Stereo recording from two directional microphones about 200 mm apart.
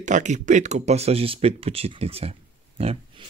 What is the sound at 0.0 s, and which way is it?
Speech, 40° right (ahead or behind).